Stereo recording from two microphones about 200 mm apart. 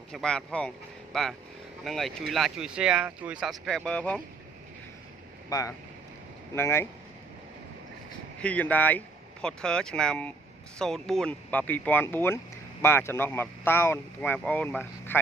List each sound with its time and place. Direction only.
0.1 s speech: 5° left (ahead or behind)
5.5 s speech: 15° left (ahead or behind)
8.4 s speech: 5° left (ahead or behind)